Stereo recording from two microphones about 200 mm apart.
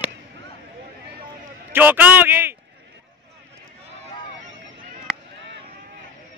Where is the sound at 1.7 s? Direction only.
10° right (ahead or behind).